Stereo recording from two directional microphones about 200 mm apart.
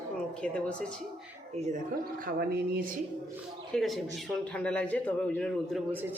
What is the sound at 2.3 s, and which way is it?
Speech, 50° right (ahead or behind).